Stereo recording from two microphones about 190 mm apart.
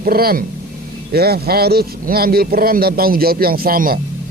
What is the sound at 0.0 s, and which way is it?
A man's voice, 50° right (ahead or behind).